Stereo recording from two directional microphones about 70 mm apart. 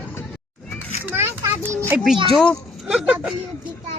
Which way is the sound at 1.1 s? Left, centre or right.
Right.